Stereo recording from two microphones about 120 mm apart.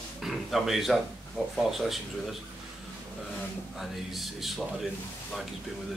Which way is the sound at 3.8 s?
Centre (ahead or behind).